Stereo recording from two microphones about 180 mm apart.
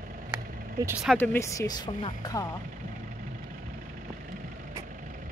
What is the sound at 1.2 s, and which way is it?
Speech, 15° left (ahead or behind).